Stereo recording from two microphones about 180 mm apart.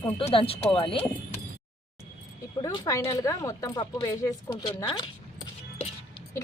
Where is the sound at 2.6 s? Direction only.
20° left (ahead or behind).